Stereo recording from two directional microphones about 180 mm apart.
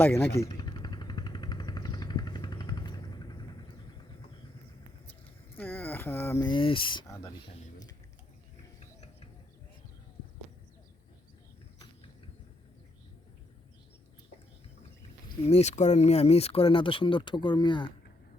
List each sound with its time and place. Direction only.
0.0 s speech: 10° left (ahead or behind)
0.3 s vehicle: 20° left (ahead or behind)
5.5 s a sound: 10° left (ahead or behind)
6.4 s speech: 25° left (ahead or behind)
7.1 s speech: 15° left (ahead or behind)
15.4 s speech: 35° left (ahead or behind)